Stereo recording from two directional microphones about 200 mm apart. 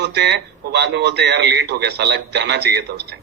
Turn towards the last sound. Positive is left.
turn(degrees=-55)  # may be behind; listen again after turning